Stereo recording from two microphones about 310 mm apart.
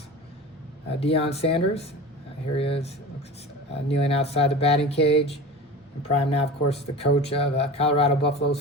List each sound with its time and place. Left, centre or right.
0.9 s speech: centre